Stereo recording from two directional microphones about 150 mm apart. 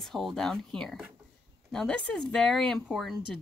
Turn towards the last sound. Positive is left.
turn(degrees=0)  # may be behind; listen again after turning